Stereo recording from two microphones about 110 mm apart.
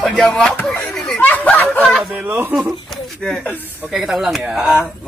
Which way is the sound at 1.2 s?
15° left (ahead or behind).